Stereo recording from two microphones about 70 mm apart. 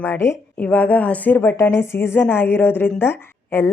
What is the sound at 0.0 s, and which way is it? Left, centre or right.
Speech, left.